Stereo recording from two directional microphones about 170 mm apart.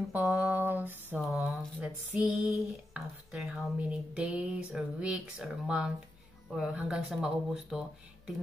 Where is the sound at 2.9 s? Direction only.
5° right (ahead or behind).